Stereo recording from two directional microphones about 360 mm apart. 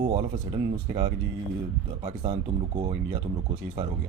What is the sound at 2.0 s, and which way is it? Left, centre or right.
Speech, centre.